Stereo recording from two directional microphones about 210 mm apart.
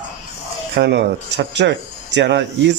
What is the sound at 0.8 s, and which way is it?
Speech, 55° right (ahead or behind).